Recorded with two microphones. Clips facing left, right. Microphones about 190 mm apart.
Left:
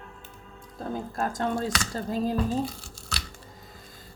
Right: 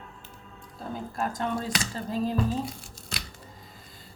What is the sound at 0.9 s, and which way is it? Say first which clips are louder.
Speech: left 2 dB; 45° left (ahead or behind).